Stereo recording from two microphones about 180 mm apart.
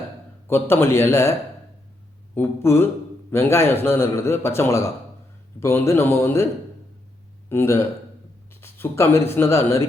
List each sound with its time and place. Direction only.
0.4 s speech: 15° left (ahead or behind)
7.5 s speech: 15° left (ahead or behind)